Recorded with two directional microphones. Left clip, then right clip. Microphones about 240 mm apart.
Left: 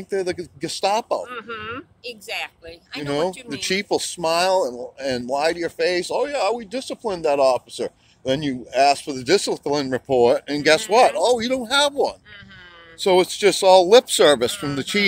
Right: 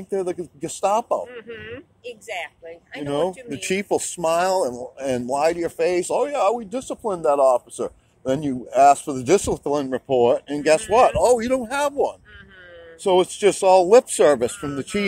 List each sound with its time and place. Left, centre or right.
0.6 s speech: centre
1.3 s speech: left
3.1 s speech: centre
9.8 s speech: centre